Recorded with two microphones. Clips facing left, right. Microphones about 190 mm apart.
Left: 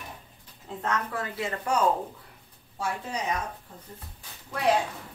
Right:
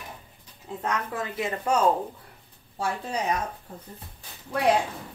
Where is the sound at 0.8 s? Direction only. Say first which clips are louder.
Right 1 dB; 20° right (ahead or behind).